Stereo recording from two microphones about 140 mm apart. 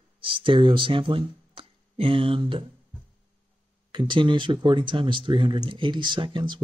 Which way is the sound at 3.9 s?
35° right (ahead or behind).